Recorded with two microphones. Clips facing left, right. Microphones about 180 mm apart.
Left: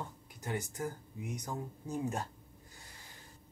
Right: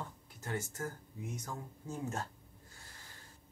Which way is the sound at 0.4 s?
15° left (ahead or behind).